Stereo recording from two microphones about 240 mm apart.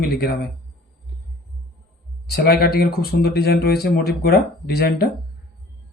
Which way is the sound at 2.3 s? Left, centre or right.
Left.